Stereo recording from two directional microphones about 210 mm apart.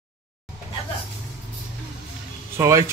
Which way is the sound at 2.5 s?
15° right (ahead or behind).